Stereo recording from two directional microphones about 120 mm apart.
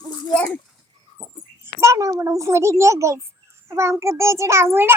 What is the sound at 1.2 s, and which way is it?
Dog, 10° left (ahead or behind).